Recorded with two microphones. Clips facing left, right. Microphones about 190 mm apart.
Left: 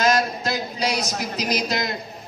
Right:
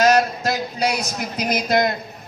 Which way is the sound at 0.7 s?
55° right (ahead or behind).